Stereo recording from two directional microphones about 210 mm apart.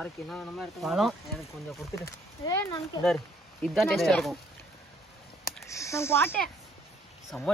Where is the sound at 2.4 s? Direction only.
15° left (ahead or behind).